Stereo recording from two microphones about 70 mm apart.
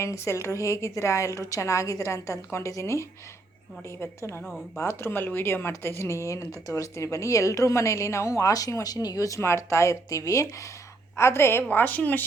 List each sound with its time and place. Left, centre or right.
0.0 s a woman's voice: left
9.4 s a woman's voice: left
11.2 s a woman's voice: left
11.7 s speech: left